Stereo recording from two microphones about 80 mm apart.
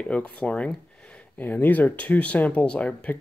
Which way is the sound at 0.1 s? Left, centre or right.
Centre.